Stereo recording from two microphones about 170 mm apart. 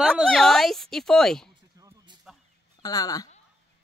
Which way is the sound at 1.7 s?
25° right (ahead or behind).